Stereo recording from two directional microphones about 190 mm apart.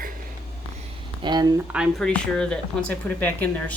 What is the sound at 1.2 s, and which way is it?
Speech, 20° right (ahead or behind).